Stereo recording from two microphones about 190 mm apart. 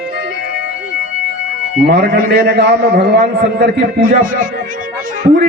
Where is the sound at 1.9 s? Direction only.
45° right (ahead or behind).